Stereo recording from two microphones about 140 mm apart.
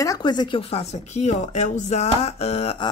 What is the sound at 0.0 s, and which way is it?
Speech, 30° left (ahead or behind).